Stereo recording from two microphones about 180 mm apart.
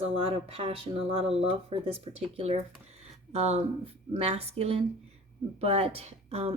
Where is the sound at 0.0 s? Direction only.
35° right (ahead or behind).